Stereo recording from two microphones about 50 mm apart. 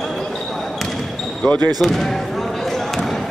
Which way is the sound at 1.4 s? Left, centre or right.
Left.